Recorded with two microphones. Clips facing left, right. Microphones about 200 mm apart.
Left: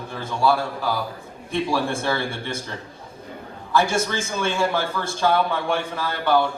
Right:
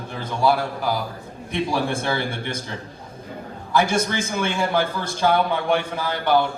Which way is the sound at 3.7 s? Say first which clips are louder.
Right 1 dB; 20° right (ahead or behind).